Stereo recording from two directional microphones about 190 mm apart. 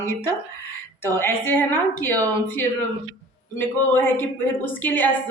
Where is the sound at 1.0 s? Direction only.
10° left (ahead or behind).